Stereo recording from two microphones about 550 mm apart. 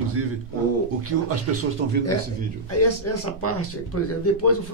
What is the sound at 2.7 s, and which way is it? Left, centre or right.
Speech, left.